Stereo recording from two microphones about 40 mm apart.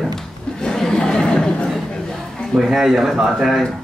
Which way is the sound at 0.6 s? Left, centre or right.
Centre.